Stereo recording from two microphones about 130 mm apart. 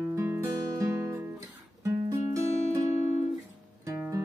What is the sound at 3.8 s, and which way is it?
Music, 25° right (ahead or behind).